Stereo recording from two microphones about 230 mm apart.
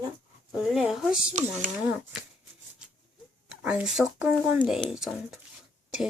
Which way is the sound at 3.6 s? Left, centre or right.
Centre.